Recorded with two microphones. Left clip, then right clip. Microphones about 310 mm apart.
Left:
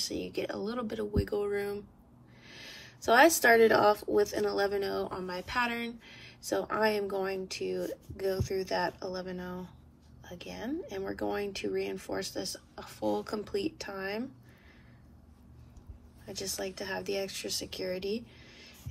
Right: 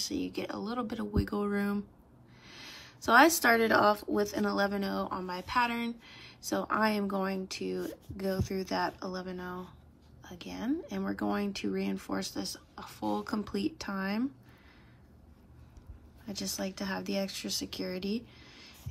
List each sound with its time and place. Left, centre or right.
0.0 s speech: right
10.3 s speech: right
16.3 s speech: right